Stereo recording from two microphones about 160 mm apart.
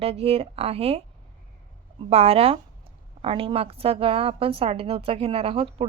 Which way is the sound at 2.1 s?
40° right (ahead or behind).